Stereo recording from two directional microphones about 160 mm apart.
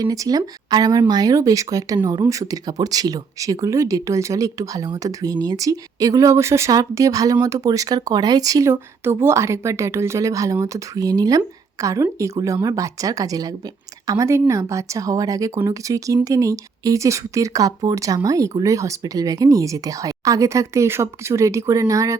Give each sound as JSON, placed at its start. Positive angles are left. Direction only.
{"t": 0.0, "sound": "speech", "side_deg": -25}